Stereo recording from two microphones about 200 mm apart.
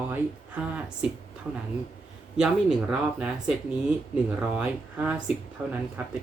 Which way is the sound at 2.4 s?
5° right (ahead or behind).